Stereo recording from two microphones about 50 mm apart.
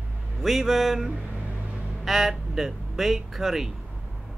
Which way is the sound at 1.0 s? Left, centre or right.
Right.